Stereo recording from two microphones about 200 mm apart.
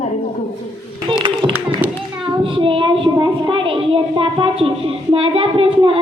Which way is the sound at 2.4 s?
25° right (ahead or behind).